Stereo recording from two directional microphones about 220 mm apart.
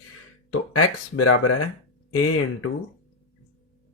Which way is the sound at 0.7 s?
90° left.